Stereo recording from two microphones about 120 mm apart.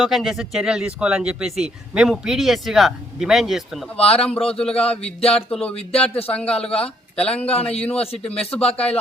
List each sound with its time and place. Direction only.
0.0 s speech: centre (ahead or behind)
3.9 s speech: 55° left (ahead or behind)
4.2 s a man's voice: 5° left (ahead or behind)
4.9 s speech: 55° left (ahead or behind)
5.5 s a man's voice: 10° left (ahead or behind)
5.7 s speech: 55° left (ahead or behind)
6.3 s a man's voice: 10° left (ahead or behind)